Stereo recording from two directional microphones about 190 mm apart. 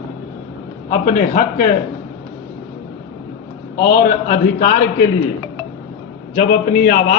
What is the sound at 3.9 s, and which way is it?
Speech, 45° left (ahead or behind).